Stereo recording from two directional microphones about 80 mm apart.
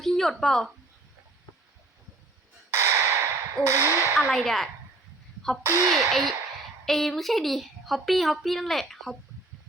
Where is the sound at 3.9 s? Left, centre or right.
Left.